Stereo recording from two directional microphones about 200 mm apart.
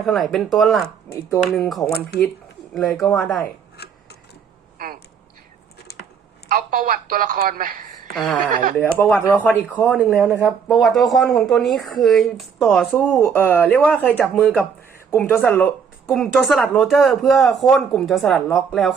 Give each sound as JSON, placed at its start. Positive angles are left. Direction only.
{"t": 0.0, "sound": "speech", "side_deg": 0}
{"t": 6.5, "sound": "speech", "side_deg": -45}
{"t": 8.1, "sound": "speech", "side_deg": 0}
{"t": 10.0, "sound": "speech", "side_deg": -10}
{"t": 10.7, "sound": "speech", "side_deg": 0}